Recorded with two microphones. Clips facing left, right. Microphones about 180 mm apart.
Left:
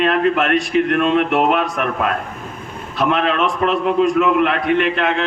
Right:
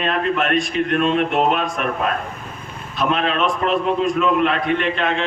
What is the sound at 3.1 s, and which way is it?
A man's voice, 60° left (ahead or behind).